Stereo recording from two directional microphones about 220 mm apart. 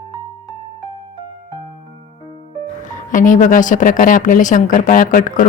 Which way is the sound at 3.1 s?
35° left (ahead or behind).